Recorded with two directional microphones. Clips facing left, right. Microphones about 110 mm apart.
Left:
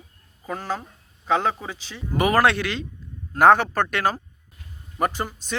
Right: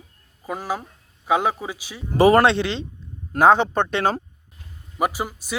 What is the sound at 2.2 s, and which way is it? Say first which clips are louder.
Speech: right 5 dB; 25° right (ahead or behind).